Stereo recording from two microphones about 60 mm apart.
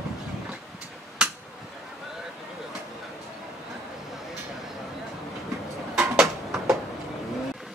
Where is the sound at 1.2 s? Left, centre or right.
Centre.